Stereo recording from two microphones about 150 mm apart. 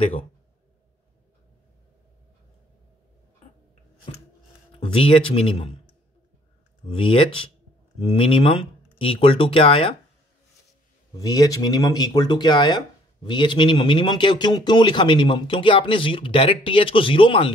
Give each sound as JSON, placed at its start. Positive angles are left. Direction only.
{"t": 4.7, "sound": "speech", "side_deg": 35}
{"t": 6.9, "sound": "speech", "side_deg": 35}
{"t": 11.1, "sound": "speech", "side_deg": 25}